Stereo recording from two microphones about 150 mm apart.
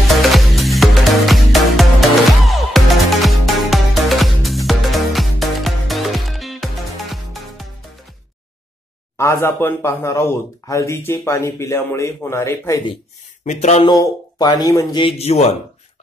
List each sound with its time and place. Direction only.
0.1 s music: centre (ahead or behind)
9.1 s speech: 15° left (ahead or behind)
13.4 s speech: 50° left (ahead or behind)
13.8 s speech: 25° left (ahead or behind); by 15.4 s 45° left (ahead or behind)